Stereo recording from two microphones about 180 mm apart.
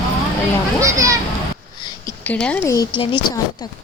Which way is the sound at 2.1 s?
5° left (ahead or behind).